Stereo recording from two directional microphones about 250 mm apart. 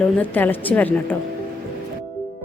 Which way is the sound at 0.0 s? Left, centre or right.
Centre.